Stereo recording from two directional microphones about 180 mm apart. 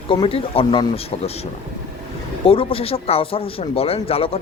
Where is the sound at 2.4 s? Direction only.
30° left (ahead or behind).